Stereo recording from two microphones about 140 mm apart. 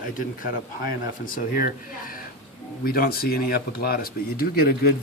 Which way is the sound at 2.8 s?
90° left.